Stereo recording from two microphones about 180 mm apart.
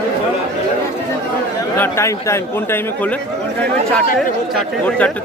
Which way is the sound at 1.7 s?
10° left (ahead or behind).